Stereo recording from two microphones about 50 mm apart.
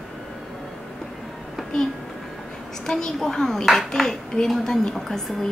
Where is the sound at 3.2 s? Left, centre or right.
Centre.